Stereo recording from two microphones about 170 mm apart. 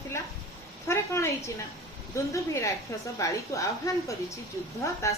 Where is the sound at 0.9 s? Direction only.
15° left (ahead or behind).